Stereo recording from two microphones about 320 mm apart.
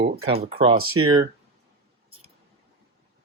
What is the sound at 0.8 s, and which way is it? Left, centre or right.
Speech, right.